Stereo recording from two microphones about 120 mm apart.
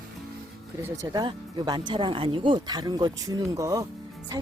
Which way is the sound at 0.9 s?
30° right (ahead or behind).